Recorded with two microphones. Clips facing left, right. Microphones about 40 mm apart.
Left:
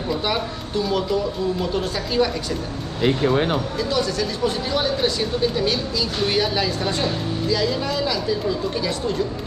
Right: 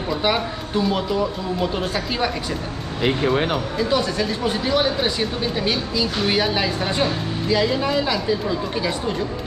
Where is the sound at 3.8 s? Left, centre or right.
Centre.